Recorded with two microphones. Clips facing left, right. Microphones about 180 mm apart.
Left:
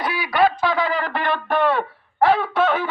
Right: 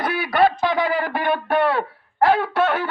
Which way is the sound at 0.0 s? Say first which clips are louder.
Right 1 dB; 50° right (ahead or behind).